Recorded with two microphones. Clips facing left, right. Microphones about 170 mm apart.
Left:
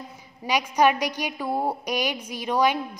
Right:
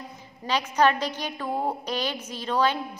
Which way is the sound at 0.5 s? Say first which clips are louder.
Left 2 dB; 10° left (ahead or behind).